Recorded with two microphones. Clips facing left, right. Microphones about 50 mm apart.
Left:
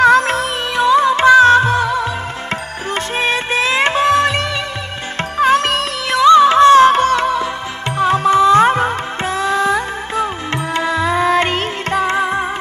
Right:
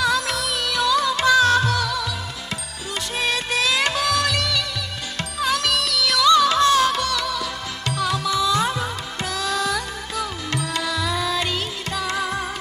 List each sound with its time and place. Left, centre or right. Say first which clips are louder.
0.0 s music: left 11 dB; left